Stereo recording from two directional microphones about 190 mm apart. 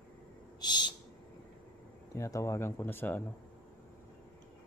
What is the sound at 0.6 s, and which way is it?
Owl, 20° left (ahead or behind).